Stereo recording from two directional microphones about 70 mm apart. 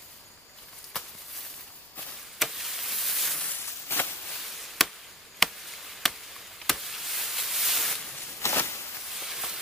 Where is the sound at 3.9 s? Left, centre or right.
Left.